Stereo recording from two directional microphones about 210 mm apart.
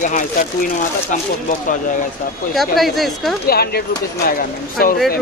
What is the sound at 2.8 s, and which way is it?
Speech, centre (ahead or behind).